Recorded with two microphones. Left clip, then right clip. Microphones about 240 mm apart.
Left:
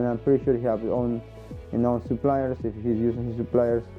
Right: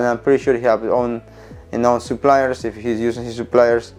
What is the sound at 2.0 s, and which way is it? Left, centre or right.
Speech, centre.